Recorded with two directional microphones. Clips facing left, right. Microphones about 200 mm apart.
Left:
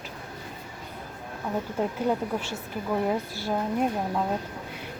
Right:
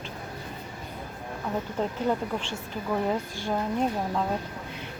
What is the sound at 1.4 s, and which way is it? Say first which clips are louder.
A woman's voice: left 1 dB; 10° left (ahead or behind).